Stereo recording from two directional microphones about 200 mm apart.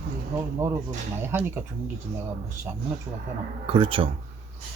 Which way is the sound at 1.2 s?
10° right (ahead or behind).